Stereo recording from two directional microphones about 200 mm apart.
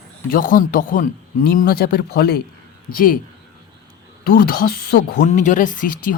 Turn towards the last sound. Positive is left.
turn(degrees=40)  # may be behind; listen again after turning